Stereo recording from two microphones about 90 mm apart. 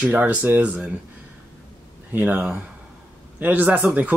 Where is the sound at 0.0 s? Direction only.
15° right (ahead or behind).